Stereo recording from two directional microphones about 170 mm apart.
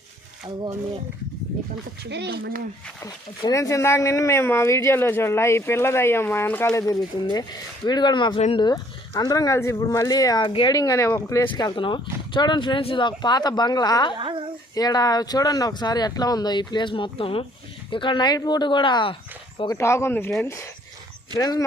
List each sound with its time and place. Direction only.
0.4 s speech: 20° right (ahead or behind)
2.0 s speech: 90° right; by 2.6 s 65° right (ahead or behind)
3.0 s speech: 20° left (ahead or behind)
14.2 s speech: 30° right (ahead or behind)
14.8 s speech: 20° left (ahead or behind)
19.7 s speech: 15° left (ahead or behind)